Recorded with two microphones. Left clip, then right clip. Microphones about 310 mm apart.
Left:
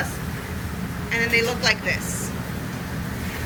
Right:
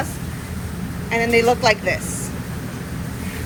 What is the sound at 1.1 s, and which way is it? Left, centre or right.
Speech, centre.